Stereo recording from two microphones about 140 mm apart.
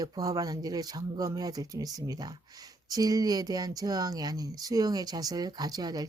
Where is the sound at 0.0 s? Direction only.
25° right (ahead or behind).